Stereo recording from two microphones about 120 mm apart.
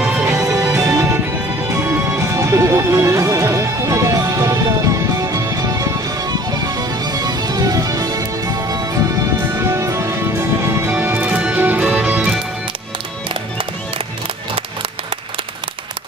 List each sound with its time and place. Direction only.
0.2 s music: 25° right (ahead or behind)
10.9 s music: 15° right (ahead or behind)
14.5 s music: 50° right (ahead or behind)